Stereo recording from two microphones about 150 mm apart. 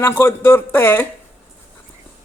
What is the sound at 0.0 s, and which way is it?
Speech, 15° left (ahead or behind).